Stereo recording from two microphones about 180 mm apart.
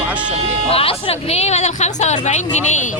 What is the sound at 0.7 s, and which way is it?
Speech, 30° left (ahead or behind).